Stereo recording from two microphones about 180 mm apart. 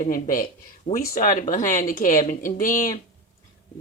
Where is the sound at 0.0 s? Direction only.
50° left (ahead or behind).